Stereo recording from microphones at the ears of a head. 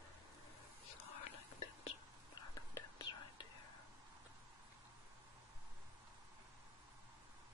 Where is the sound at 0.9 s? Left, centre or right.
Left.